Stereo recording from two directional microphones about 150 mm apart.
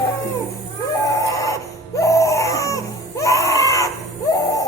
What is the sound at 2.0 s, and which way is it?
Baby cry, 20° left (ahead or behind).